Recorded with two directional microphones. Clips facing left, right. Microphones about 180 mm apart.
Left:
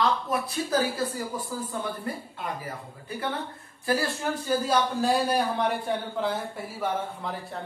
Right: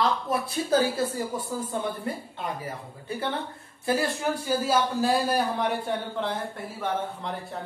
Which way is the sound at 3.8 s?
20° right (ahead or behind).